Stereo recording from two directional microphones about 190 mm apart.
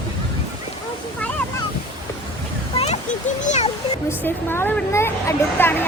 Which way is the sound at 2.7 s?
35° left (ahead or behind).